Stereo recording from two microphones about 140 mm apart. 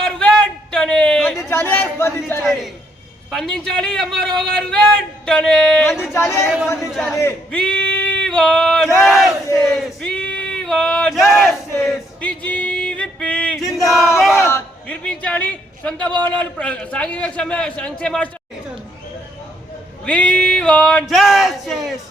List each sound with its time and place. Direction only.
0.0 s a sound: 5° left (ahead or behind)
1.5 s a man's voice: 15° left (ahead or behind)
2.4 s a man's voice: centre (ahead or behind)
6.1 s speech: 20° left (ahead or behind)
7.5 s male singing: 5° left (ahead or behind)
9.0 s battle cry: centre (ahead or behind)
9.6 s speech: 5° left (ahead or behind)
12.5 s music: 10° left (ahead or behind)
13.6 s a sound: centre (ahead or behind)
13.9 s battle cry: centre (ahead or behind)
14.3 s a sound: 15° left (ahead or behind)
16.2 s a man's voice: 10° left (ahead or behind)
20.1 s a man's voice: 10° left (ahead or behind)